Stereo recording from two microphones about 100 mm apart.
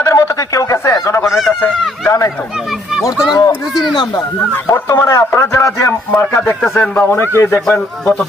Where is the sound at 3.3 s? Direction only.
35° left (ahead or behind).